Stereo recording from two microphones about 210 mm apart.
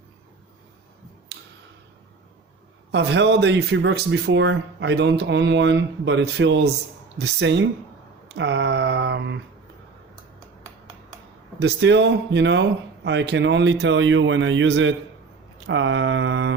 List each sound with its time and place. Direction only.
1.3 s tick-tock: 50° right (ahead or behind)
2.9 s speech: 55° right (ahead or behind)
11.6 s speech: 55° right (ahead or behind)